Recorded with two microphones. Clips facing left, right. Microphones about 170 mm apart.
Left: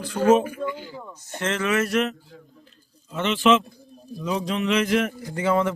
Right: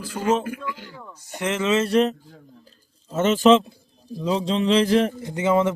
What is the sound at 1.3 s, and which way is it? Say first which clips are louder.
Speech: right 2 dB; 15° right (ahead or behind).